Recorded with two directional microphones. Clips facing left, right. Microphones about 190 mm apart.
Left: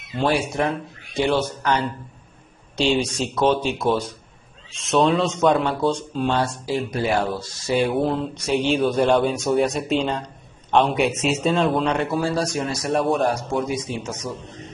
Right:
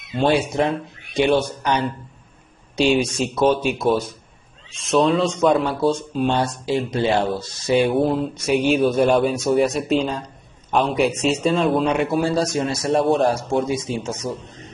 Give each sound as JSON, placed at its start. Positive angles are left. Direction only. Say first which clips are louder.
{"t": 0.1, "sound": "a man's voice", "louder": "right 3 dB", "side_deg": -25}
{"t": 2.8, "sound": "speech", "louder": "right 3 dB", "side_deg": -10}
{"t": 4.7, "sound": "speech", "louder": "right 1 dB", "side_deg": 0}
{"t": 6.1, "sound": "a man's voice", "louder": "right 2 dB", "side_deg": -20}
{"t": 11.9, "sound": "a man's voice", "louder": "right 3 dB", "side_deg": -15}